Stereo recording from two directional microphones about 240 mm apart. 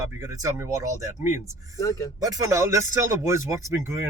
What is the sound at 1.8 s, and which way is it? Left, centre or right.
Speech, centre.